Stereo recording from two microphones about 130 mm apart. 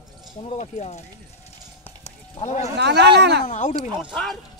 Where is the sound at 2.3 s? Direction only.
60° left (ahead or behind).